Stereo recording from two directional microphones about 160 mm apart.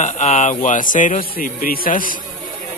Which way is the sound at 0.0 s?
50° left (ahead or behind).